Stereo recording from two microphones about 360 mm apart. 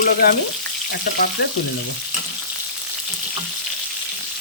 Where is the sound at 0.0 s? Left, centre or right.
Left.